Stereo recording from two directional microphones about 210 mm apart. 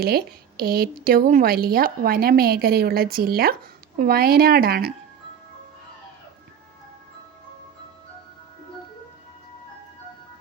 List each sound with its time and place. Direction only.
0.0 s a woman's voice: 45° right (ahead or behind)